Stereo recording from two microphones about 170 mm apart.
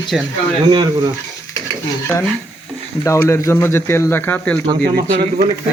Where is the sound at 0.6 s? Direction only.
25° right (ahead or behind).